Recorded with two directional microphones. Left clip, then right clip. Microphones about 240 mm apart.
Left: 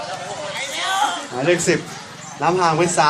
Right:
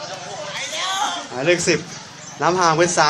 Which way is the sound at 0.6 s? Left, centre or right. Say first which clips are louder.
Left 2 dB; right.